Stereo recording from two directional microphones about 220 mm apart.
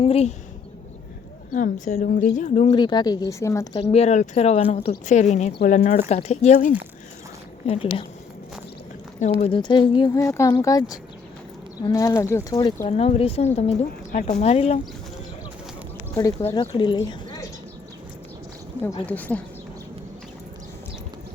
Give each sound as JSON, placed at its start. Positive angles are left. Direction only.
{"t": 0.0, "sound": "a woman's voice", "side_deg": 30}
{"t": 1.5, "sound": "a woman's voice", "side_deg": 35}
{"t": 2.7, "sound": "speech", "side_deg": 20}
{"t": 3.9, "sound": "a woman's voice", "side_deg": 30}
{"t": 9.4, "sound": "a woman's voice", "side_deg": 20}
{"t": 12.8, "sound": "a woman's voice", "side_deg": 30}
{"t": 16.1, "sound": "speech", "side_deg": 15}
{"t": 19.0, "sound": "speech", "side_deg": 5}